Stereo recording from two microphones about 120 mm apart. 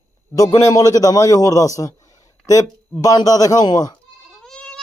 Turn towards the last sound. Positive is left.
turn(degrees=5)  # may be behind; listen again after turning